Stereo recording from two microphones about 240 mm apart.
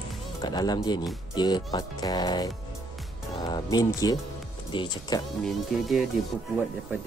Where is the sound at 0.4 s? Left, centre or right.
Centre.